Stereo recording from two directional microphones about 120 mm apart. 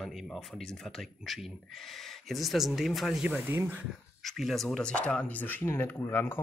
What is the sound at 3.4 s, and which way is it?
Speech, 15° right (ahead or behind).